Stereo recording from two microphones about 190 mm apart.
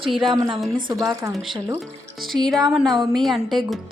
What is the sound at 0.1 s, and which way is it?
Speech, centre (ahead or behind).